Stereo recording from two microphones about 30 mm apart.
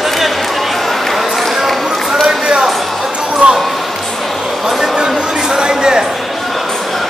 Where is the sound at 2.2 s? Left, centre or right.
Centre.